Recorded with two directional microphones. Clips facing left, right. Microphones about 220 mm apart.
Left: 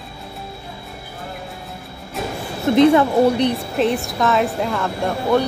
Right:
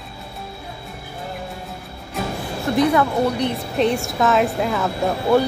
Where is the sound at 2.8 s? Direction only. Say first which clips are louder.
Left 5 dB; 25° left (ahead or behind).